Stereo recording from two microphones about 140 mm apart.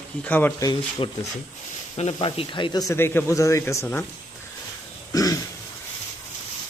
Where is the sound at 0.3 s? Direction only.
15° left (ahead or behind).